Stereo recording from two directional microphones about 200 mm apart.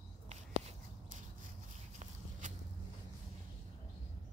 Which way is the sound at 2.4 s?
40° right (ahead or behind).